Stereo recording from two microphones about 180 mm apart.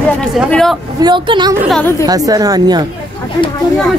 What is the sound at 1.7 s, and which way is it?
Speech, 10° left (ahead or behind).